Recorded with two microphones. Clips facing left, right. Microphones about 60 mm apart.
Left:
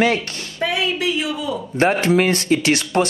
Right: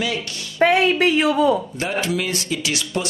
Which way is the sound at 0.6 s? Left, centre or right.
Right.